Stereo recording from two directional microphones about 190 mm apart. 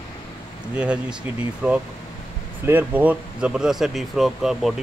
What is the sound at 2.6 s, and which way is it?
Speech, 10° right (ahead or behind).